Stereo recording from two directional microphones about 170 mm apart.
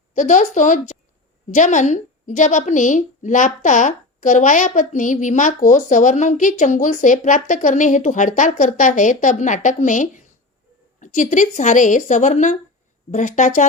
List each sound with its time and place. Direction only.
0.1 s a woman's voice: 45° left (ahead or behind)